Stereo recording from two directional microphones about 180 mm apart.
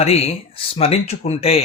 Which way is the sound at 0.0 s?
35° left (ahead or behind).